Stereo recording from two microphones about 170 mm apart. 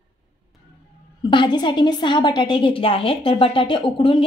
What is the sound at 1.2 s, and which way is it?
A woman's voice, 25° left (ahead or behind).